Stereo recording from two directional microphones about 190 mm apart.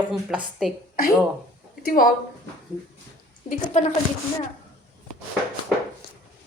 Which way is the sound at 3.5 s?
40° left (ahead or behind).